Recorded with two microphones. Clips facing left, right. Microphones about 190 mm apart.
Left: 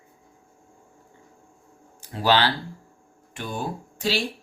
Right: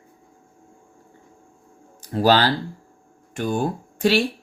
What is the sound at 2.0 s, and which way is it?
Speech, 40° right (ahead or behind).